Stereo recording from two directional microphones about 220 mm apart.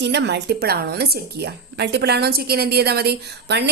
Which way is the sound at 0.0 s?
50° right (ahead or behind).